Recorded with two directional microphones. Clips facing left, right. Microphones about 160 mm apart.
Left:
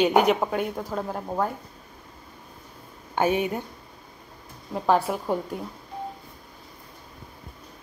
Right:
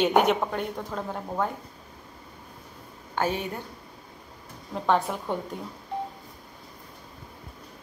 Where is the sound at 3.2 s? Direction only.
10° left (ahead or behind).